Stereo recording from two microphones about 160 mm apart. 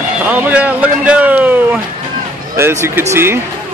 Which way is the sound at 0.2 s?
10° right (ahead or behind).